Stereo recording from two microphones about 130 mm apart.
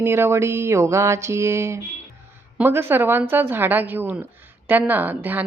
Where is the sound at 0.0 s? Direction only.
20° right (ahead or behind).